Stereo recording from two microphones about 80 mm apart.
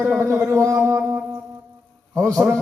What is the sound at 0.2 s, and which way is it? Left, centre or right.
Speech, right.